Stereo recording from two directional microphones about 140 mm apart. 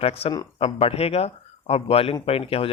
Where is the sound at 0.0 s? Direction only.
45° left (ahead or behind).